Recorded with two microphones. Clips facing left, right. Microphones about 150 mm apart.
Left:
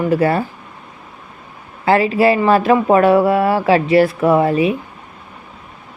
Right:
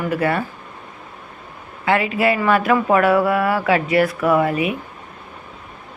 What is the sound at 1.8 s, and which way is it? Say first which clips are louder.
Speech: left 5 dB; 35° left (ahead or behind).